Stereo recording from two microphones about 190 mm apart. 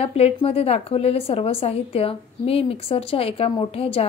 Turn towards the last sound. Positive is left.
turn(degrees=30)  # may be behind; listen again after turning